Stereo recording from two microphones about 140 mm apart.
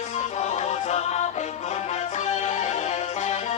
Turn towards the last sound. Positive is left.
turn(degrees=55)  # may be behind; listen again after turning